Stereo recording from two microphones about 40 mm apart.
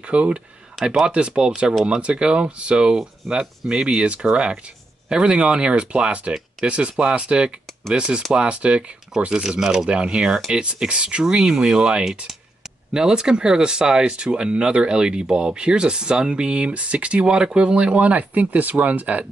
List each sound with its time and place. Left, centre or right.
0.0 s speech: right
0.8 s speech: centre
4.0 s speech: right
7.0 s speech: centre
7.2 s speech: right
9.3 s speech: centre
9.8 s speech: right
17.2 s speech: right
17.9 s speech: right